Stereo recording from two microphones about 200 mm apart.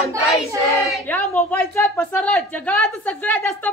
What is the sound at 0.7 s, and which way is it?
A woman's voice, 15° left (ahead or behind).